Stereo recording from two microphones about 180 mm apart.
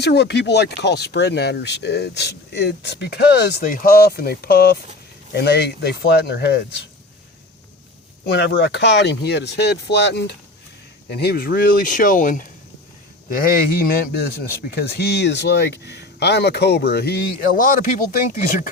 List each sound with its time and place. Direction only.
0.0 s speech: 70° left (ahead or behind)
8.2 s speech: 70° left (ahead or behind); by 17.9 s 50° left (ahead or behind)